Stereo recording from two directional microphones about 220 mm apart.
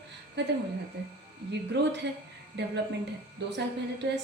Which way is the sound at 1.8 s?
50° right (ahead or behind).